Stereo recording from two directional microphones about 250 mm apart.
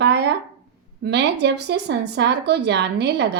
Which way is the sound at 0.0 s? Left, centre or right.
Right.